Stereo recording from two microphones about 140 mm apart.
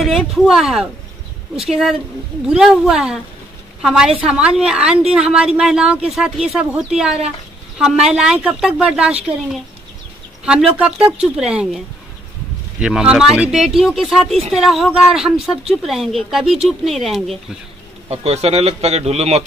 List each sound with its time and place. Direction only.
0.0 s speech: centre (ahead or behind)
10.4 s speech: 5° right (ahead or behind)
12.8 s speech: 5° right (ahead or behind)
18.1 s speech: 50° right (ahead or behind)